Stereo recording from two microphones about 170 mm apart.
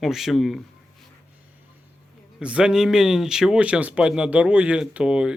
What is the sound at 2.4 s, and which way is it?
Speech, 5° right (ahead or behind).